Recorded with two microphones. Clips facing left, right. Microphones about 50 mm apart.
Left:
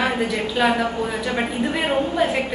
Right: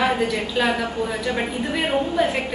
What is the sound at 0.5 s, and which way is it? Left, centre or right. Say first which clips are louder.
Speech: left 3 dB; centre.